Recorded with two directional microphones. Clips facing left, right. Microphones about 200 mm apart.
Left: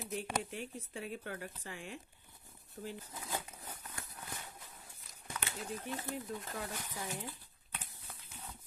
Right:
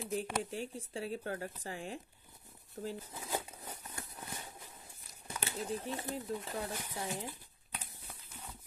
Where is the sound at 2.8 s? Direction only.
35° right (ahead or behind).